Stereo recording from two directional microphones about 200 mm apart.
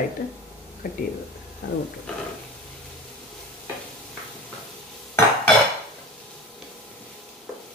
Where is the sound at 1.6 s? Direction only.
60° left (ahead or behind).